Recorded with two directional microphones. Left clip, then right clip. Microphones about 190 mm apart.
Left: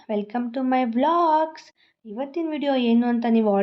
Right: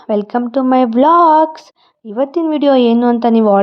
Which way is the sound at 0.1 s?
40° right (ahead or behind).